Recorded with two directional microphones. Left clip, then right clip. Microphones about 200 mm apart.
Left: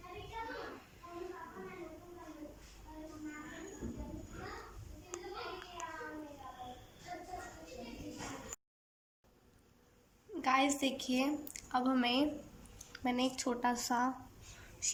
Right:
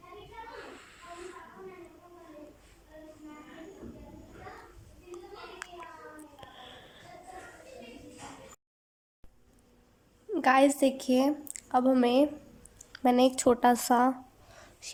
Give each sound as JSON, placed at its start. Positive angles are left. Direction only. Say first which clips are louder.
{"t": 5.6, "sound": "child singing", "louder": "right 7 dB", "side_deg": -50}
{"t": 10.3, "sound": "a woman's voice", "louder": "right 9 dB", "side_deg": -35}
{"t": 14.8, "sound": "whispering", "louder": "right 2 dB", "side_deg": -25}